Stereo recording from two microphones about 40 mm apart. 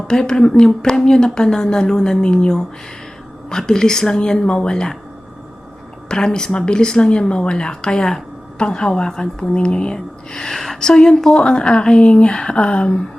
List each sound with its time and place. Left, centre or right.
0.1 s speech: centre
6.1 s speech: centre
10.4 s a woman's voice: centre
10.8 s speech: left